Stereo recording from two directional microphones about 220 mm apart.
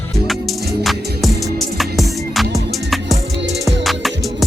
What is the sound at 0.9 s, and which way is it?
Music, centre (ahead or behind).